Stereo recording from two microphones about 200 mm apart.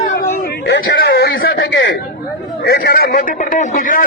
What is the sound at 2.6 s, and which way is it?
A man's voice, 50° left (ahead or behind).